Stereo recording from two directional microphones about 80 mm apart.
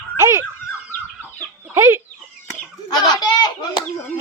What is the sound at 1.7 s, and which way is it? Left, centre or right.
Chicken, right.